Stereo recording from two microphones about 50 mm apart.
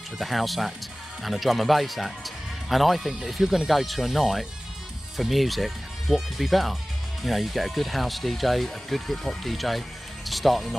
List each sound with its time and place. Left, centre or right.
0.2 s speech: centre